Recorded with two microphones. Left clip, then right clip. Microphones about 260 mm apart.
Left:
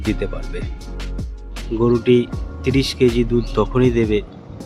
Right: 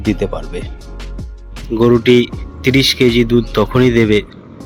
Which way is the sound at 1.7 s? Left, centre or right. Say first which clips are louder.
Right 5 dB; centre.